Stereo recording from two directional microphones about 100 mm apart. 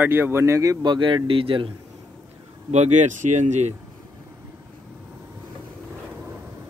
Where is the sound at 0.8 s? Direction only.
55° right (ahead or behind).